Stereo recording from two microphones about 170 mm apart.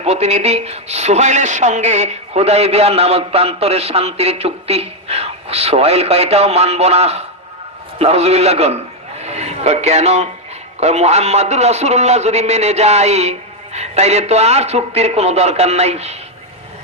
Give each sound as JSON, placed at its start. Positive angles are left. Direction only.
{"t": 0.0, "sound": "a man's voice", "side_deg": -40}